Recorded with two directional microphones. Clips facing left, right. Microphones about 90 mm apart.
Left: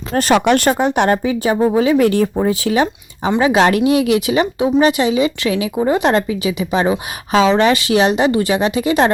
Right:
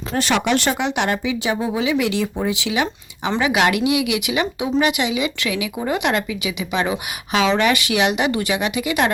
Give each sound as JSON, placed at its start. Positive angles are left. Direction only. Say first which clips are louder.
{"t": 0.2, "sound": "a woman's voice", "louder": "left 6 dB", "side_deg": 45}